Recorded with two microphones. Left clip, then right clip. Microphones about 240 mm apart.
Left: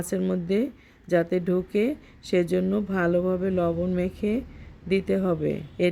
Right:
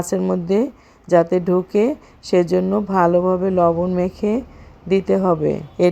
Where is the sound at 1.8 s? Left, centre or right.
Right.